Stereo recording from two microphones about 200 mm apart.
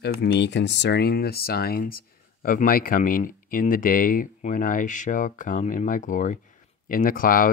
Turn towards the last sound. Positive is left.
turn(degrees=45)  # may be behind; listen again after turning